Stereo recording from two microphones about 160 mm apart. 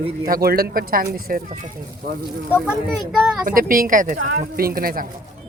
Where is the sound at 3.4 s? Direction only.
60° right (ahead or behind).